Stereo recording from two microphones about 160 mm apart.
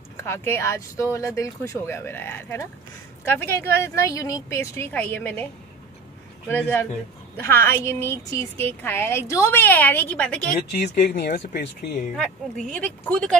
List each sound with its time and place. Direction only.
0.2 s a woman's voice: 15° left (ahead or behind)
6.5 s a woman's voice: 15° left (ahead or behind)
10.5 s speech: 90° left
12.2 s speech: 5° left (ahead or behind)